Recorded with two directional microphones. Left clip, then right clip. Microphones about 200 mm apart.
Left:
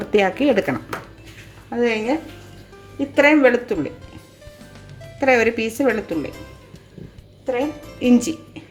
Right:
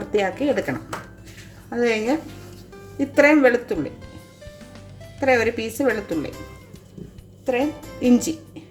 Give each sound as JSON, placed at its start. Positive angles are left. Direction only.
{"t": 0.0, "sound": "speech", "side_deg": 20}
{"t": 1.7, "sound": "a woman's voice", "side_deg": -10}
{"t": 5.2, "sound": "speech", "side_deg": 10}
{"t": 7.4, "sound": "speech", "side_deg": -25}
{"t": 7.9, "sound": "speech", "side_deg": -10}